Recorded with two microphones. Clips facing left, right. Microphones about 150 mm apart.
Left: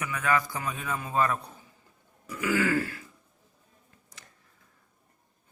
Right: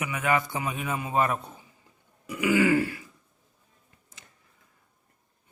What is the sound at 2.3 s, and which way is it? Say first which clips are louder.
Throat clearing: right 4 dB; 15° right (ahead or behind).